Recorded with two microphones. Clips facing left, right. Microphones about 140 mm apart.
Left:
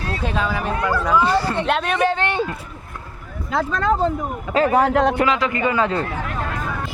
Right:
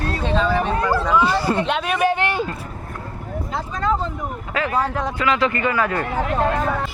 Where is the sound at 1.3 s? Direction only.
10° right (ahead or behind).